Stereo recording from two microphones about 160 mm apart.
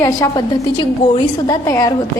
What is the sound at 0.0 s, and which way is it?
A woman's voice, 25° left (ahead or behind).